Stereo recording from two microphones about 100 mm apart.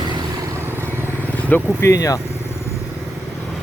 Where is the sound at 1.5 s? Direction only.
20° left (ahead or behind).